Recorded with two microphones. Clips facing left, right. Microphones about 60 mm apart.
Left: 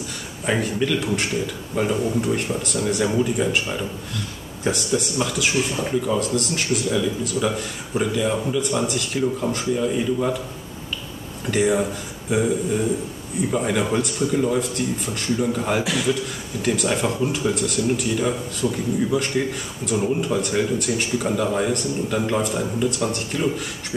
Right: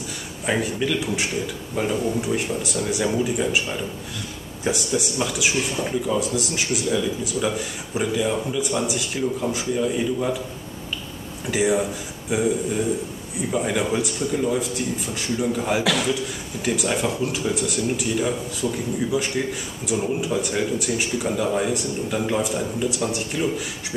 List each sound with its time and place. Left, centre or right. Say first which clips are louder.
0.5 s speech: left 1 dB; centre
4.6 s speech: left 1 dB; centre
6.1 s speech: left 1 dB; centre
9.8 s speech: right 1 dB; centre
11.5 s speech: left 1 dB; centre
15.8 s a man's voice: right 2 dB; right
16.6 s speech: left 1 dB; centre
17.0 s speech: left 2 dB; centre